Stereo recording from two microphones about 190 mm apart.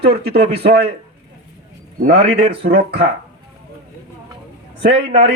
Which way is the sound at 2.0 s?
35° right (ahead or behind).